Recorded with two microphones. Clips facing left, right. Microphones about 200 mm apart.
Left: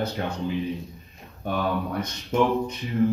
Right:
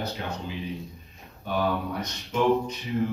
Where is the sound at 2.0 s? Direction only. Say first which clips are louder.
Left 3 dB; 55° left (ahead or behind).